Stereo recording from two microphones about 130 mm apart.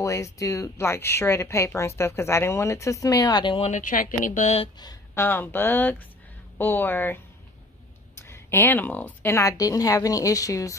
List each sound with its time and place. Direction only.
0.0 s speech: 25° left (ahead or behind)
3.6 s speech: 80° left
5.1 s speech: 20° left (ahead or behind)
8.2 s speech: 20° left (ahead or behind)